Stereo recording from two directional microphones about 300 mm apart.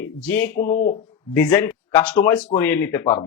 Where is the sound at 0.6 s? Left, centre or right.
Left.